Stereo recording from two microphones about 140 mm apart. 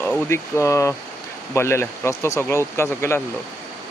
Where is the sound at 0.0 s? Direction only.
5° left (ahead or behind).